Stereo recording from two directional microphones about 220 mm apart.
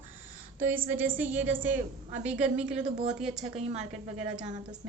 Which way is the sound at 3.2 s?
Centre (ahead or behind).